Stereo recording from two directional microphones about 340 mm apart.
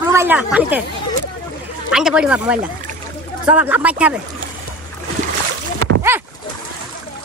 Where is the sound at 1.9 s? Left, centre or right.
Centre.